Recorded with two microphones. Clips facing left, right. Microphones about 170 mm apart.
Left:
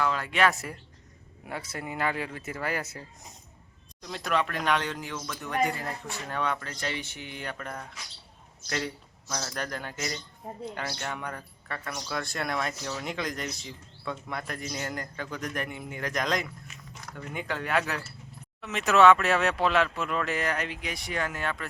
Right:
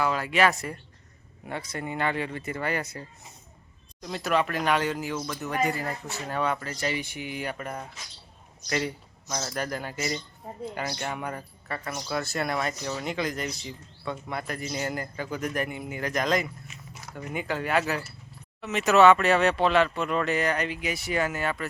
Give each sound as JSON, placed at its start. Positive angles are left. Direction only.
{"t": 0.0, "sound": "speech", "side_deg": -5}
{"t": 9.3, "sound": "speech", "side_deg": -5}